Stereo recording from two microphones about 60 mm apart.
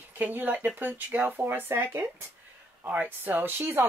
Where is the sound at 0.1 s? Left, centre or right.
Right.